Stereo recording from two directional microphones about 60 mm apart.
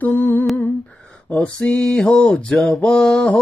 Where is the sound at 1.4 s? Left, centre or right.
Centre.